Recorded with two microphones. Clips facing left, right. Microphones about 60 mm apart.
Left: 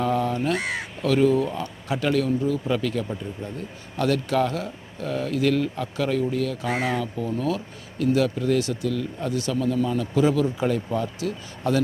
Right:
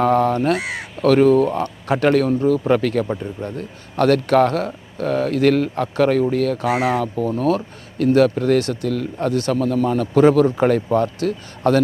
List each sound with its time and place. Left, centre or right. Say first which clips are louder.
0.0 s crow: right 7 dB; right
0.6 s speech: right 1 dB; centre
1.0 s speech: right 7 dB; right